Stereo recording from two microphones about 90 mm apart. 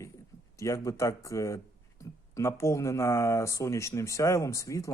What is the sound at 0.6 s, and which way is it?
Speech, 35° left (ahead or behind).